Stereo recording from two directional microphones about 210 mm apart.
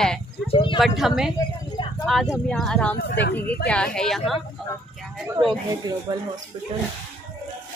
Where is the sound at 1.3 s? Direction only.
15° left (ahead or behind).